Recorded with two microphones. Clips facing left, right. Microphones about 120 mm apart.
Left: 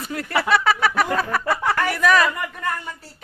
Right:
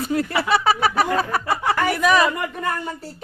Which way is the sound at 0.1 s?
25° right (ahead or behind).